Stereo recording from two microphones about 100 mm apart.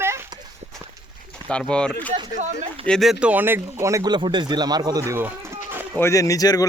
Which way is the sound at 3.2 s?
15° right (ahead or behind).